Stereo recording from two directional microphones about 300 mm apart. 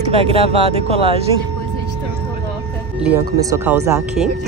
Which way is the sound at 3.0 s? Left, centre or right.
Centre.